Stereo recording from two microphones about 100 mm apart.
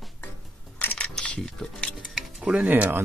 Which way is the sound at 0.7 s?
15° left (ahead or behind).